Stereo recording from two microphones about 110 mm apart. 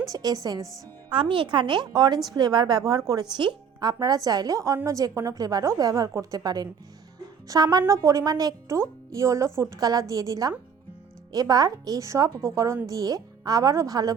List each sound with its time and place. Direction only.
0.1 s speech: 35° right (ahead or behind)
1.1 s a woman's voice: 50° right (ahead or behind); by 14.2 s 35° right (ahead or behind)